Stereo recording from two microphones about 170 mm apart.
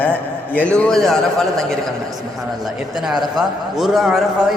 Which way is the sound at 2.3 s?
Centre (ahead or behind).